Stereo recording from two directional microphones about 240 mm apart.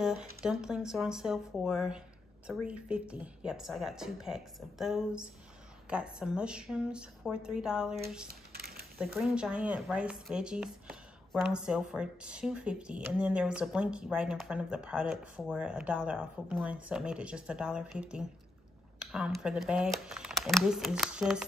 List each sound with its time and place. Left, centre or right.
0.0 s speech: centre
8.5 s a sound: right
8.9 s speech: centre